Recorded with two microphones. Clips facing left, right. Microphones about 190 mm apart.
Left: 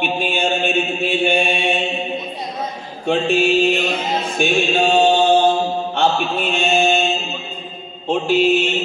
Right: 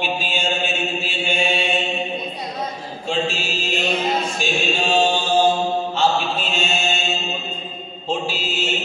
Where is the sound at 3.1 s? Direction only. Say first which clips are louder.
Left 8 dB; 55° left (ahead or behind).